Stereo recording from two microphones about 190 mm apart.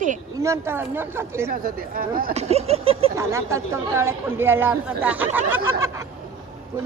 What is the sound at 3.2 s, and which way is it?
Speech, 15° right (ahead or behind).